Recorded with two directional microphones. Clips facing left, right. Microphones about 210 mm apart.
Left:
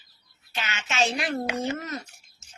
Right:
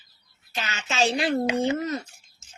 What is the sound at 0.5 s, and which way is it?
Speech, 35° right (ahead or behind).